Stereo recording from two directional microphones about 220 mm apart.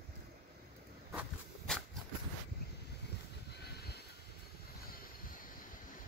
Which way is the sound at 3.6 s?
45° left (ahead or behind).